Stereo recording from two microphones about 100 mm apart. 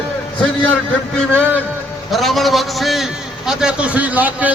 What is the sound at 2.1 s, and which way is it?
A man's voice, centre (ahead or behind).